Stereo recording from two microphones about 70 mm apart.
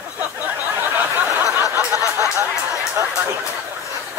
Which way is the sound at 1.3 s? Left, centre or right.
Right.